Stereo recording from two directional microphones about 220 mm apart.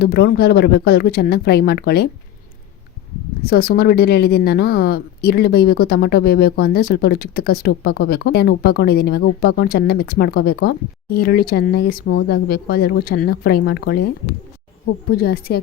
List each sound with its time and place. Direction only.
0.0 s a woman's voice: 45° left (ahead or behind)
3.4 s a woman's voice: 45° left (ahead or behind)